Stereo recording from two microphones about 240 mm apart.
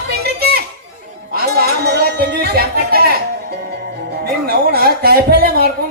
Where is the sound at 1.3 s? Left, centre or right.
Right.